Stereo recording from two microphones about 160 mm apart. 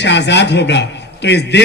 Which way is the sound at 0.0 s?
90° left.